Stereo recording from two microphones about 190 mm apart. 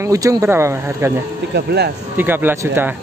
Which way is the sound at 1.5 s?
60° right (ahead or behind).